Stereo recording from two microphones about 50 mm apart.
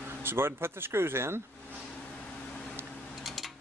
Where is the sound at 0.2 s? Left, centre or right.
Right.